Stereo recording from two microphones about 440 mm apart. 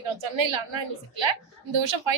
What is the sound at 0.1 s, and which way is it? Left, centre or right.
A woman's voice, right.